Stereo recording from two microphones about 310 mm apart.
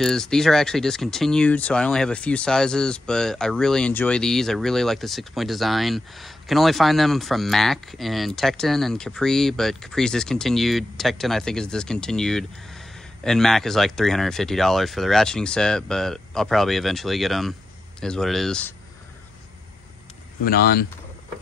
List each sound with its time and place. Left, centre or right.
0.0 s speech: centre
20.4 s speech: left